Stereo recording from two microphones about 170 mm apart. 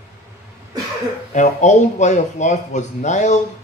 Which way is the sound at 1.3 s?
45° left (ahead or behind).